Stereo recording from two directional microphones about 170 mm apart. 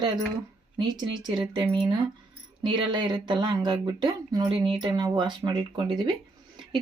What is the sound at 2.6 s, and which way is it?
Speech, 25° right (ahead or behind).